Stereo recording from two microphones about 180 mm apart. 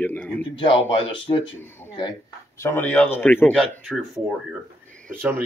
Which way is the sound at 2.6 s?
10° left (ahead or behind).